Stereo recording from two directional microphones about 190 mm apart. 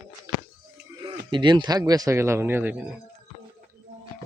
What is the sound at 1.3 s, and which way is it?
Speech, 25° right (ahead or behind).